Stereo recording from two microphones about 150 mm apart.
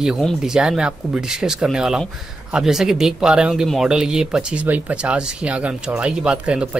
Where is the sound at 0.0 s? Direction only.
5° right (ahead or behind).